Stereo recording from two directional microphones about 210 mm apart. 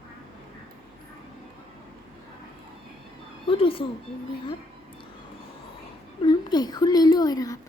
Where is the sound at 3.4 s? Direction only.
25° left (ahead or behind).